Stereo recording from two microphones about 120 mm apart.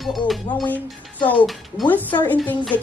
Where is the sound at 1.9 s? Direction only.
15° left (ahead or behind).